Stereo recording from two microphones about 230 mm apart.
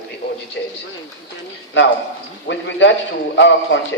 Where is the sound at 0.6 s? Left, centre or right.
Left.